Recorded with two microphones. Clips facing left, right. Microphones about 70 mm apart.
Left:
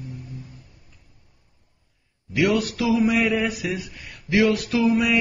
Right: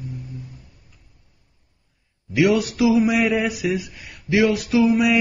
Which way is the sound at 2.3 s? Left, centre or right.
Centre.